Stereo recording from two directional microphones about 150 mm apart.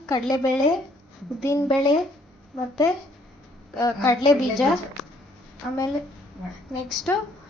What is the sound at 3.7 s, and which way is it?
Speech, 20° left (ahead or behind).